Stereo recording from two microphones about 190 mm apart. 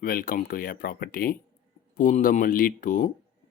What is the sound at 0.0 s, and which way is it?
Speech, 50° left (ahead or behind).